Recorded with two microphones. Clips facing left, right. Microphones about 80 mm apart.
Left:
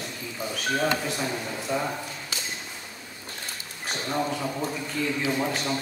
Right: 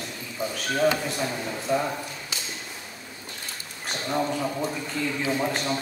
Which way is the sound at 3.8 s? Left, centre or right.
Centre.